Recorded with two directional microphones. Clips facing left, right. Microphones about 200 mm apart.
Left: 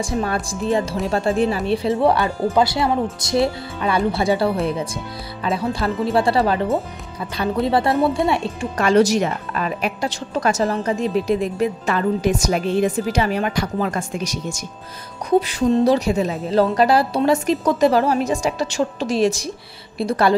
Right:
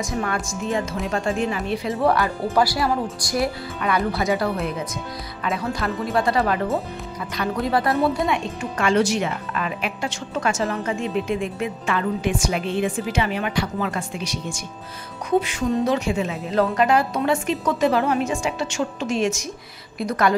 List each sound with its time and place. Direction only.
0.0 s speech: 30° left (ahead or behind)
7.6 s speech: 30° left (ahead or behind)